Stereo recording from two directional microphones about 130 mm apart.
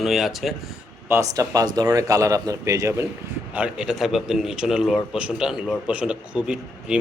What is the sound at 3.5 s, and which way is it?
Speech, 5° right (ahead or behind).